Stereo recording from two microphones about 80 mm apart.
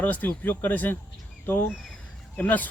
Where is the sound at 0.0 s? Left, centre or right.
Left.